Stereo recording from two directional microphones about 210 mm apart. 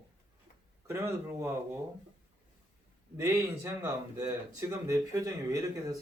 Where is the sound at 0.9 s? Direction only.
10° right (ahead or behind).